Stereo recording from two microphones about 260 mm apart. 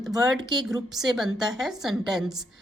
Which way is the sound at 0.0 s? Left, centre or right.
Centre.